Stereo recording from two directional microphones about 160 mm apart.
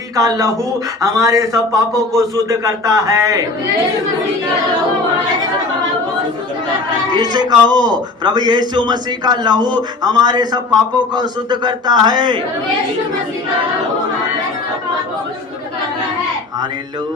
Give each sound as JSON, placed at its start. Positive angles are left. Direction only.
{"t": 0.2, "sound": "a man's voice", "side_deg": -20}
{"t": 7.1, "sound": "a man's voice", "side_deg": -25}